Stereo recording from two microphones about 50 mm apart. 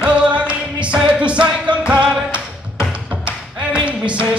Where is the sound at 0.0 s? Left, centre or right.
Right.